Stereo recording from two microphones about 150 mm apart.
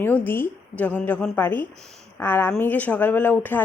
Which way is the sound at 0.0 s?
15° left (ahead or behind).